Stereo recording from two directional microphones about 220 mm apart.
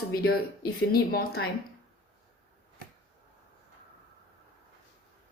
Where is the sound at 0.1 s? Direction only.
45° left (ahead or behind).